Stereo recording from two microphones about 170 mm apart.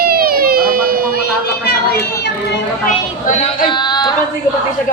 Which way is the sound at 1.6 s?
70° left (ahead or behind).